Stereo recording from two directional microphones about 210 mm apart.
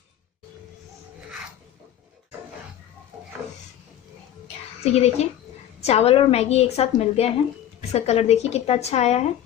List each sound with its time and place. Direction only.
4.9 s a woman's voice: 30° left (ahead or behind)